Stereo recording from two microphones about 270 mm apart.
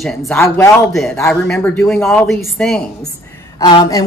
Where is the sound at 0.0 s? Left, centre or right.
Centre.